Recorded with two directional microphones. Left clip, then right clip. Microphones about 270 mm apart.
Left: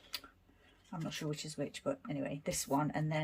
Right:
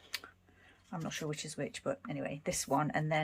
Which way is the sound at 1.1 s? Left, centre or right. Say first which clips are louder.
Right 1 dB; centre.